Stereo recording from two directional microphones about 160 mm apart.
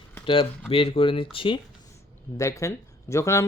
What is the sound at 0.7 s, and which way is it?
Speech, 35° left (ahead or behind).